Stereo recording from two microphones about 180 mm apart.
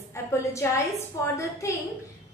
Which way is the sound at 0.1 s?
15° left (ahead or behind).